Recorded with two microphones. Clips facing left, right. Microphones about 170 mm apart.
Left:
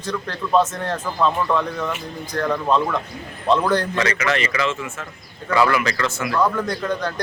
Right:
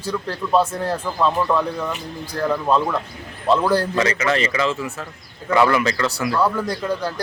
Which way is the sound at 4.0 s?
30° right (ahead or behind).